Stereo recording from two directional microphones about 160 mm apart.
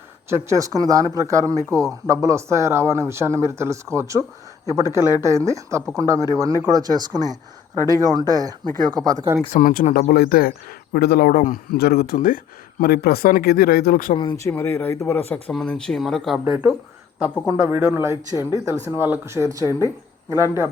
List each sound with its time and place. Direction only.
0.3 s speech: 15° right (ahead or behind)
9.5 s speech: 55° left (ahead or behind)
12.8 s speech: 75° left (ahead or behind)
14.2 s speech: 25° left (ahead or behind); by 16.4 s centre (ahead or behind)
17.4 s speech: 15° right (ahead or behind)